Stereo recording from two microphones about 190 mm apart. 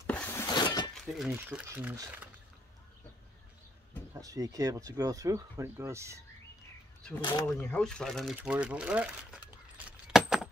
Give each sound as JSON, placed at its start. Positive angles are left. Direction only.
{"t": 0.0, "sound": "a sound", "side_deg": 5}
{"t": 0.9, "sound": "speech", "side_deg": 0}
{"t": 4.1, "sound": "speech", "side_deg": -20}
{"t": 7.4, "sound": "speech", "side_deg": 5}